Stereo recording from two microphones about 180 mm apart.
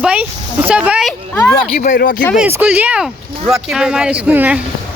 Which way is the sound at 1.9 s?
60° left (ahead or behind).